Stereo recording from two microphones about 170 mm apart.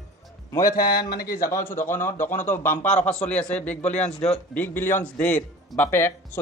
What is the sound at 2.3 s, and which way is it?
Speech, 45° left (ahead or behind).